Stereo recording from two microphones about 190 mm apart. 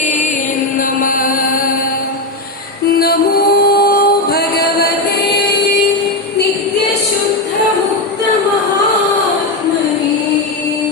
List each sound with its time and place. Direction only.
0.8 s chant: 45° left (ahead or behind)
2.9 s music: 50° left (ahead or behind)